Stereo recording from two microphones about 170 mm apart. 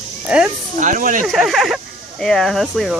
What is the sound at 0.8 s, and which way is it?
Speech, 50° right (ahead or behind).